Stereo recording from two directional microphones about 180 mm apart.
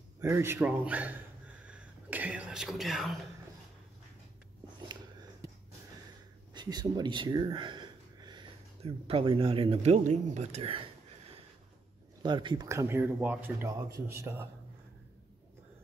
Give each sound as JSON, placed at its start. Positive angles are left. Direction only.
{"t": 0.2, "sound": "speech", "side_deg": -15}
{"t": 1.6, "sound": "whispering", "side_deg": -5}
{"t": 6.5, "sound": "speech", "side_deg": -25}
{"t": 12.2, "sound": "speech", "side_deg": -25}